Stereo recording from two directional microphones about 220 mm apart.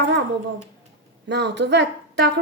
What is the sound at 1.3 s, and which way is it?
A woman's voice, 50° right (ahead or behind).